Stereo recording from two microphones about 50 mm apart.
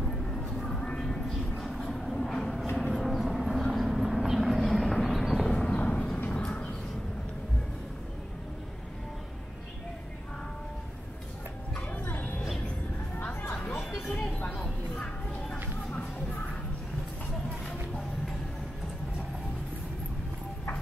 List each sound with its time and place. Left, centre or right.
0.3 s music: centre
1.9 s vehicle: centre
5.5 s a sound: centre
5.8 s vehicle: left
6.4 s a sound: left
11.9 s music: left
15.0 s music: left